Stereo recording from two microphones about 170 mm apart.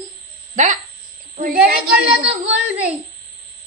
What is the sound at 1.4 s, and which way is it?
Speech, 60° right (ahead or behind).